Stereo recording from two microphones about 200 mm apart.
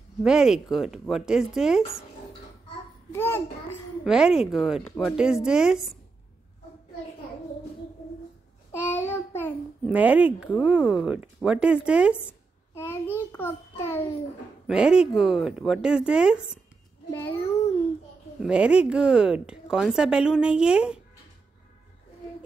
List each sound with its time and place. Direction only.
0.2 s a woman's voice: 5° right (ahead or behind)
3.1 s a child's voice: 10° left (ahead or behind)
4.0 s a woman's voice: 5° right (ahead or behind)
8.9 s child singing: 10° left (ahead or behind)
9.8 s a woman's voice: 5° right (ahead or behind)
12.7 s a child's voice: 10° left (ahead or behind)
14.7 s a woman's voice: 5° right (ahead or behind)
17.1 s a child's voice: 10° left (ahead or behind)
18.4 s a woman's voice: 5° right (ahead or behind)